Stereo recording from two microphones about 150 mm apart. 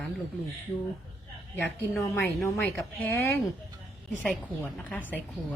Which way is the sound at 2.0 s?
15° left (ahead or behind).